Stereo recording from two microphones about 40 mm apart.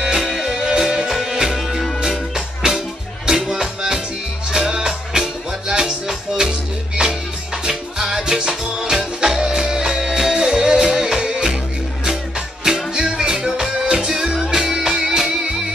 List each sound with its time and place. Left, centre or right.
0.0 s music: centre